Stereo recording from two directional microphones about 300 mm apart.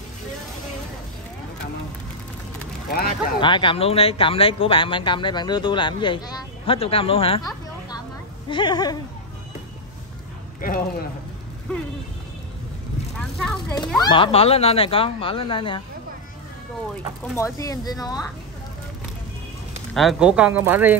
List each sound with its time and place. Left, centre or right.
2.9 s speech: left
3.3 s speech: centre
10.6 s speech: left
11.7 s speech: centre
13.2 s speech: centre
13.7 s speech: centre
17.6 s speech: centre
19.9 s speech: centre